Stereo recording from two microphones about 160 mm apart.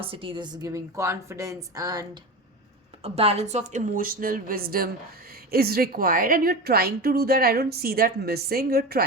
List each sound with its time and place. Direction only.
0.0 s a woman's voice: 35° right (ahead or behind)
3.0 s a woman's voice: 40° right (ahead or behind); by 9.0 s 75° right (ahead or behind)